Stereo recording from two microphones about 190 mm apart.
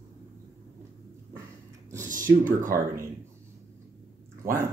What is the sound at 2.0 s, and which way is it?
Speech, 45° right (ahead or behind).